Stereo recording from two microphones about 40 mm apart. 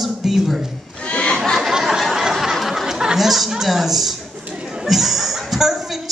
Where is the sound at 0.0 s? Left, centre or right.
Centre.